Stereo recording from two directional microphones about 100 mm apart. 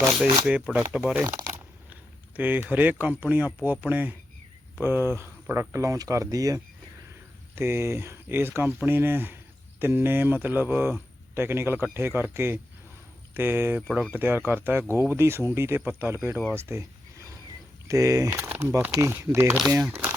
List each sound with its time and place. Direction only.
0.0 s speech: 5° right (ahead or behind)
1.2 s speech: 35° right (ahead or behind)
1.9 s speech: 20° right (ahead or behind); by 6.6 s 35° right (ahead or behind)
7.5 s speech: 25° right (ahead or behind)
16.6 s a sound: 25° right (ahead or behind)
17.8 s speech: 35° right (ahead or behind)
18.3 s speech: 20° right (ahead or behind)
19.9 s crumpling: 20° right (ahead or behind)